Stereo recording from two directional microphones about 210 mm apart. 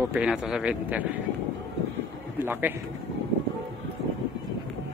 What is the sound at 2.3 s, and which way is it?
Speech, 10° right (ahead or behind).